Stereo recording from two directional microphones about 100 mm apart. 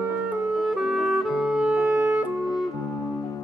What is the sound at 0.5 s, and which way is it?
Clarinet, 5° right (ahead or behind).